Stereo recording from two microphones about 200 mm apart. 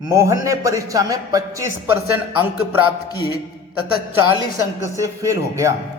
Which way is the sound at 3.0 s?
20° left (ahead or behind).